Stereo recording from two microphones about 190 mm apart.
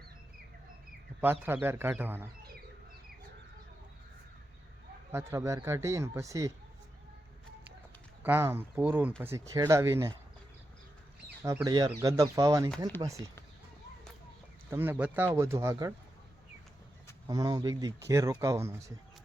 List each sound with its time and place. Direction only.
1.2 s speech: 10° right (ahead or behind)
5.1 s speech: 15° right (ahead or behind)
8.2 s speech: 10° right (ahead or behind)
11.4 s speech: 20° right (ahead or behind)
14.7 s speech: 10° right (ahead or behind)
17.2 s speech: 20° right (ahead or behind)